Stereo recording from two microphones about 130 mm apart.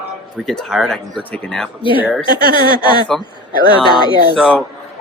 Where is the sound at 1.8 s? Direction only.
40° left (ahead or behind).